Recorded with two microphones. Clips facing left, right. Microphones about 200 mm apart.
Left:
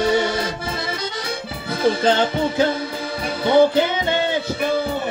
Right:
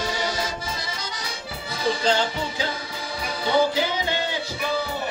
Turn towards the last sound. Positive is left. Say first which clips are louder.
# left 6 dB
turn(degrees=55)  # may be behind; listen again after turning